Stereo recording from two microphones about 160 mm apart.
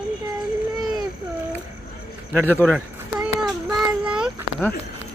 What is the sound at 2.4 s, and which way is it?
Speech, 10° left (ahead or behind).